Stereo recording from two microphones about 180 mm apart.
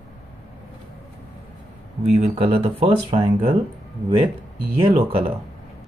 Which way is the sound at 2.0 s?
35° right (ahead or behind).